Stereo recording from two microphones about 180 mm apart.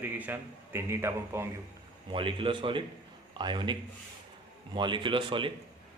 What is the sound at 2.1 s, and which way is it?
Speech, 30° right (ahead or behind).